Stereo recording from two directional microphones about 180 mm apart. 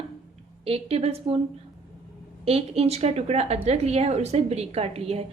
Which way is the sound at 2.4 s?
35° right (ahead or behind).